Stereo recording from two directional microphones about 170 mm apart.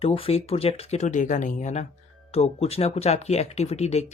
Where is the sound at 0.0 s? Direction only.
35° left (ahead or behind).